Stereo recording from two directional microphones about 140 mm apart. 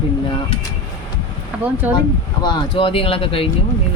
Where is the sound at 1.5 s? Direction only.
10° right (ahead or behind).